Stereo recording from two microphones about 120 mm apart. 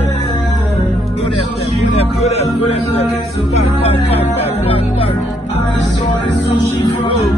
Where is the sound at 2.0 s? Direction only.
60° left (ahead or behind).